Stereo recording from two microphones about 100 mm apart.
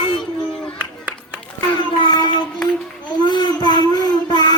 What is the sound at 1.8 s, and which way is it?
Child singing, 45° left (ahead or behind).